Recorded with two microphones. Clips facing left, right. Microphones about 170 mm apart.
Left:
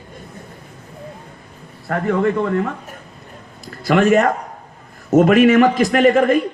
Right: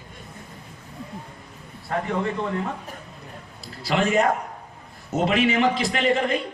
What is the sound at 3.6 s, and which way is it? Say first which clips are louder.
A man's voice: left 8 dB; 55° left (ahead or behind).